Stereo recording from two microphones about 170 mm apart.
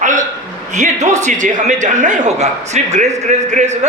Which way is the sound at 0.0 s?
50° right (ahead or behind).